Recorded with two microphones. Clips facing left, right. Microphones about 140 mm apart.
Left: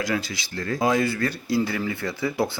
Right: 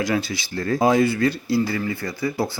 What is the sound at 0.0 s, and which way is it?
Speech, 25° right (ahead or behind).